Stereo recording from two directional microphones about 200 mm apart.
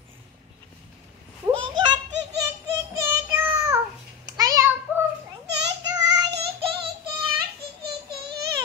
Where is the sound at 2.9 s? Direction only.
15° right (ahead or behind).